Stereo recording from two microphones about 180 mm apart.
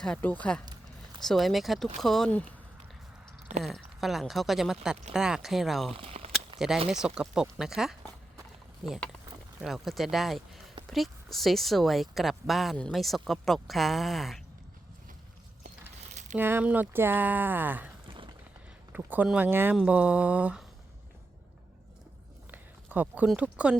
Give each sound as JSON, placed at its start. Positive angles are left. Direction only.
{"t": 0.0, "sound": "speech", "side_deg": 5}
{"t": 3.6, "sound": "speech", "side_deg": 0}
{"t": 6.0, "sound": "a sound", "side_deg": -35}
{"t": 6.8, "sound": "speech", "side_deg": -5}
{"t": 16.3, "sound": "speech", "side_deg": -10}
{"t": 18.1, "sound": "a sound", "side_deg": -30}
{"t": 18.9, "sound": "speech", "side_deg": -10}
{"t": 22.5, "sound": "a sound", "side_deg": -10}
{"t": 23.3, "sound": "speech", "side_deg": -5}